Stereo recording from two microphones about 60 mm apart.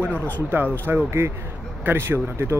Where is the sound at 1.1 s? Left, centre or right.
Right.